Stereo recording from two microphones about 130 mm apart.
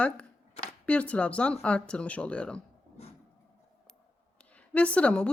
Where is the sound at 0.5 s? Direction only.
55° left (ahead or behind).